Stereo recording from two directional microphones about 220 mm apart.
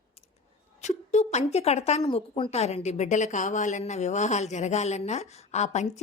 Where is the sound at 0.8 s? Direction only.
30° left (ahead or behind).